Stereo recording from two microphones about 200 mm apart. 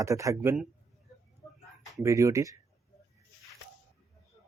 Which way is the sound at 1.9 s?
15° right (ahead or behind).